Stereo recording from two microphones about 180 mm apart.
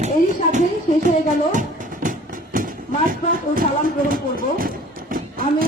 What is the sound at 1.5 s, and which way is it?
Clip-clop, 45° right (ahead or behind).